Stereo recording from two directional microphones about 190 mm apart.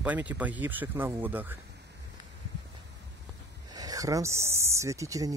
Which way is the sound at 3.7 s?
20° right (ahead or behind).